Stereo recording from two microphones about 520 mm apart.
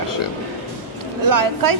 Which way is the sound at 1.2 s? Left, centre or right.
Right.